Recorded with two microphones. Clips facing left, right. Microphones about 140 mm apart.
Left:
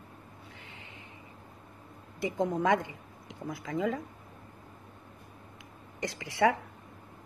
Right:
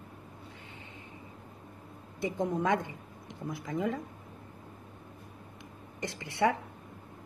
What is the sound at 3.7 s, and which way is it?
Speech, 90° left.